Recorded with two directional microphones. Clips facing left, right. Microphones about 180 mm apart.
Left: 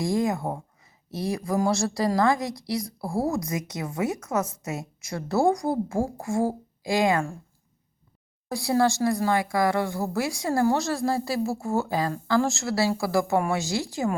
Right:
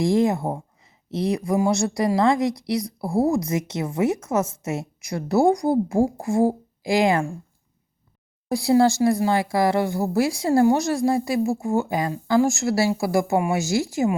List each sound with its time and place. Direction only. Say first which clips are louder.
0.0 s a woman's voice: right 5 dB; 25° right (ahead or behind)
8.4 s a woman's voice: right 5 dB; 25° right (ahead or behind)